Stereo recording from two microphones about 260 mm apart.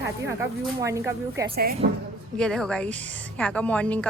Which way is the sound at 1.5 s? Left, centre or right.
Right.